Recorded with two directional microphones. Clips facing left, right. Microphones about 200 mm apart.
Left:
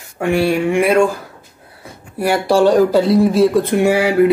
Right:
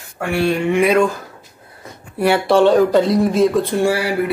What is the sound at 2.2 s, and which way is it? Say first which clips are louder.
Speech: even; 10° left (ahead or behind).